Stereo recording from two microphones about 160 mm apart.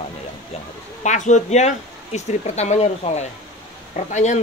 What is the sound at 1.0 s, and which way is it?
Speech, 50° left (ahead or behind).